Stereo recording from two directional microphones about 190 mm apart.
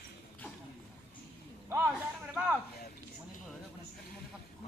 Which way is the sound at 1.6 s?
10° right (ahead or behind).